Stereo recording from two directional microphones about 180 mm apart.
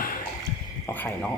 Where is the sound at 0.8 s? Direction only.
10° left (ahead or behind).